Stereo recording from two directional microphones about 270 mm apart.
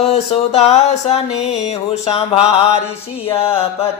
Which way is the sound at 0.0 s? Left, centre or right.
Left.